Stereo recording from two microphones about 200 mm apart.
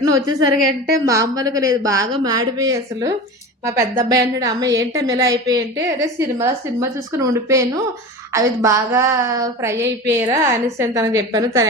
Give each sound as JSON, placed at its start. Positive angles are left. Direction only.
{"t": 0.0, "sound": "a woman's voice", "side_deg": -20}